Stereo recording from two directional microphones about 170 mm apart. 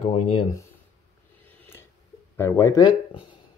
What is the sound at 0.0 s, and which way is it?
Speech, 35° left (ahead or behind).